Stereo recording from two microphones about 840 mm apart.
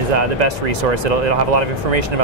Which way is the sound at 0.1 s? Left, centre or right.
Right.